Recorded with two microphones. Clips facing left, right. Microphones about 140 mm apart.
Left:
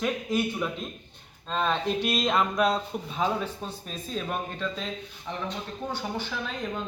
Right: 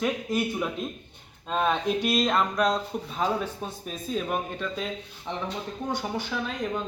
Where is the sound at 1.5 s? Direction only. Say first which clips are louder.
Right 2 dB; 10° right (ahead or behind).